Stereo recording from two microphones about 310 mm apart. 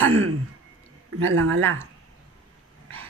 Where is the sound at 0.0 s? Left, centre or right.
Right.